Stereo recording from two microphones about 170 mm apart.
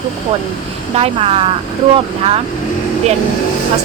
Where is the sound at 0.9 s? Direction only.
35° right (ahead or behind).